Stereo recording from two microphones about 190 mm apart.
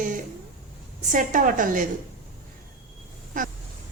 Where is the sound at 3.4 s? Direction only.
45° right (ahead or behind).